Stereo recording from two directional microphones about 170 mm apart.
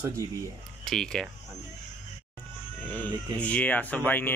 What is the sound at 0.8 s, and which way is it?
Speech, 5° left (ahead or behind).